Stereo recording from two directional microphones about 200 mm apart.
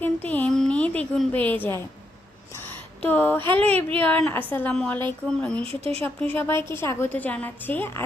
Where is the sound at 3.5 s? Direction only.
30° right (ahead or behind).